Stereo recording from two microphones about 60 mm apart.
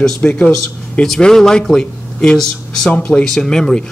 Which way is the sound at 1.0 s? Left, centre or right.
Centre.